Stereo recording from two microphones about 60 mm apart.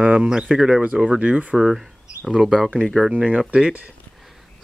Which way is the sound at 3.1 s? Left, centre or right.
Centre.